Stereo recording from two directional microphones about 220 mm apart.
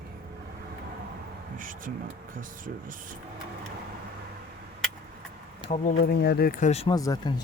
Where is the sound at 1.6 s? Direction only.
40° right (ahead or behind).